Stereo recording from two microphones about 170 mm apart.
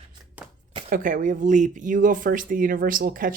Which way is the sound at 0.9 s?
50° right (ahead or behind).